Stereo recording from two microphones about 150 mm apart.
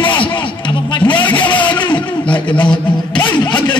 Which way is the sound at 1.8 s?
30° left (ahead or behind).